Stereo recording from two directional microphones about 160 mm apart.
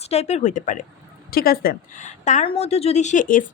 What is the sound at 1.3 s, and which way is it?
Speech, 70° left (ahead or behind).